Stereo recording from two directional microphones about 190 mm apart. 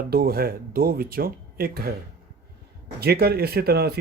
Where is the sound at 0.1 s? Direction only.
55° right (ahead or behind).